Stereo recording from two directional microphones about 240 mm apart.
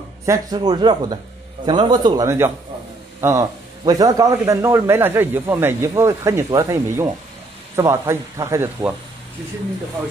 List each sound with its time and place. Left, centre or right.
0.2 s a man's voice: centre